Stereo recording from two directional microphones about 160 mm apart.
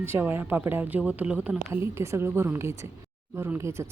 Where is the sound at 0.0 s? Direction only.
15° right (ahead or behind).